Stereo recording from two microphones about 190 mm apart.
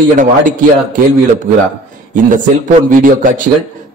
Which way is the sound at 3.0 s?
45° right (ahead or behind).